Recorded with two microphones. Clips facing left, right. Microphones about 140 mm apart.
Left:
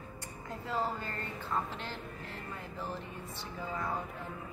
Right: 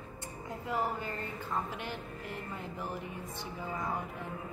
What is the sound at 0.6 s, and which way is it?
Speech, 15° right (ahead or behind).